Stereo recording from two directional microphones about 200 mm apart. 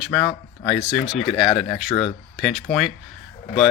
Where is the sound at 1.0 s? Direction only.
30° left (ahead or behind).